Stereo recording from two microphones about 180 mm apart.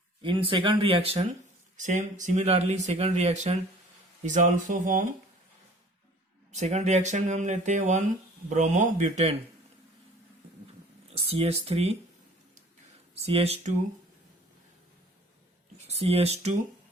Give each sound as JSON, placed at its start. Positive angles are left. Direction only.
{"t": 0.2, "sound": "speech", "side_deg": -30}
{"t": 1.7, "sound": "speech", "side_deg": -45}
{"t": 6.5, "sound": "speech", "side_deg": -40}
{"t": 11.1, "sound": "speech", "side_deg": -35}
{"t": 13.2, "sound": "speech", "side_deg": -35}
{"t": 15.9, "sound": "speech", "side_deg": -35}